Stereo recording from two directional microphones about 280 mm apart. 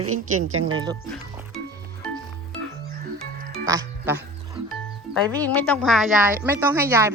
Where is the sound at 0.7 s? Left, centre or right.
Centre.